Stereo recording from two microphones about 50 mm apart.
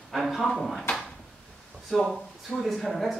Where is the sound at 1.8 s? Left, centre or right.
Centre.